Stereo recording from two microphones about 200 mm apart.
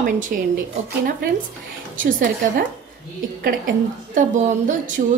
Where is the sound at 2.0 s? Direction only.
40° right (ahead or behind).